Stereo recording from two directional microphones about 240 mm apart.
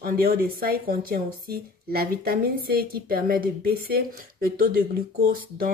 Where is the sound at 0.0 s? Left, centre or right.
Right.